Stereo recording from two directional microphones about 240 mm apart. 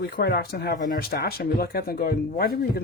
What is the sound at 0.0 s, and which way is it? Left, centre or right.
Speech, left.